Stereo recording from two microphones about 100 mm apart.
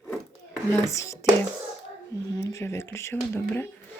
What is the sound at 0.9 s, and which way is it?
Speech, 30° left (ahead or behind).